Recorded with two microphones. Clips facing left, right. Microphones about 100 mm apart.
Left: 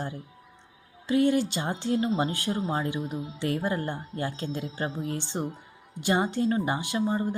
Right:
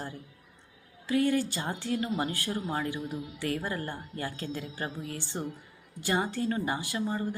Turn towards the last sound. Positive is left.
turn(degrees=25)  # may be behind; listen again after turning